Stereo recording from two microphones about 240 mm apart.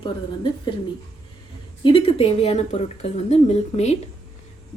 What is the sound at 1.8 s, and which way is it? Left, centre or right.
A woman's voice, left.